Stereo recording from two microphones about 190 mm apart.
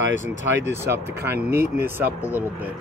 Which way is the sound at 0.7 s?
15° right (ahead or behind).